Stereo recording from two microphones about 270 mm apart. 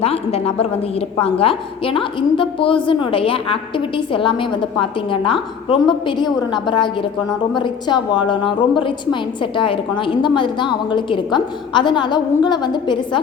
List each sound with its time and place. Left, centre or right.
0.0 s a woman's voice: left